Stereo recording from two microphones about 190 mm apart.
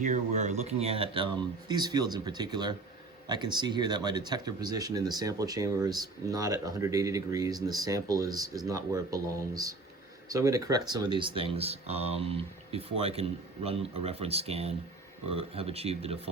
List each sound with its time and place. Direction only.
0.0 s speech: 40° right (ahead or behind)